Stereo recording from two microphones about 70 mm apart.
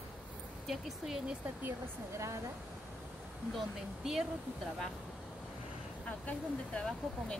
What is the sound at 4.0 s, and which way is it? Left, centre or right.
Speech, centre.